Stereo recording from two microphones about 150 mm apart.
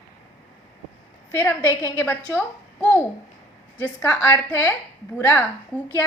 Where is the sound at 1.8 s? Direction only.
15° left (ahead or behind).